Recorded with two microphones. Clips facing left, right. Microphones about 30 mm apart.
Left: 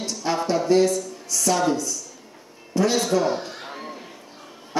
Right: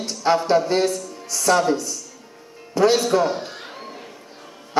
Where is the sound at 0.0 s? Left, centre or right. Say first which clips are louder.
Right 6 dB; right.